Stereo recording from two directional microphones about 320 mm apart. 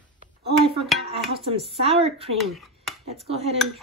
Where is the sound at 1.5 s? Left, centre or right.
Centre.